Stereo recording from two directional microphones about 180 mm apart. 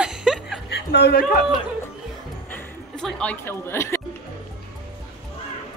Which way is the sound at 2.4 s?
5° left (ahead or behind).